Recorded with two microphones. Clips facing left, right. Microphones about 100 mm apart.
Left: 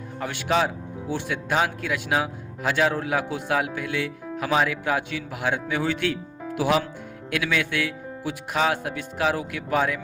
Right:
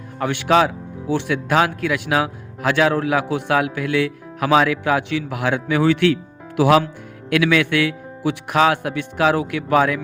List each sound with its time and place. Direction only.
0.2 s a man's voice: 70° right (ahead or behind)